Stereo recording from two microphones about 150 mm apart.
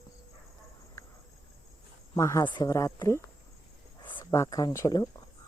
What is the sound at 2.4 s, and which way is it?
Speech, 30° left (ahead or behind).